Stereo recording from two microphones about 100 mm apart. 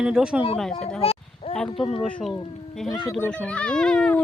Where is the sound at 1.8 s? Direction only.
70° left (ahead or behind).